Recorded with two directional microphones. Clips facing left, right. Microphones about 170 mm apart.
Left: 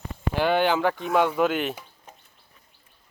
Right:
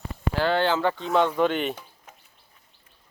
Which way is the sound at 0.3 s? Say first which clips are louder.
Left 1 dB; 15° left (ahead or behind).